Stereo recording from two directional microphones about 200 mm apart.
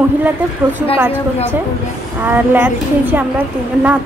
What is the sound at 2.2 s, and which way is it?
A woman's voice, 10° right (ahead or behind).